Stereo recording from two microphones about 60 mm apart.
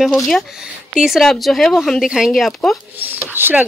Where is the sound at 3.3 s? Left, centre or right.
Right.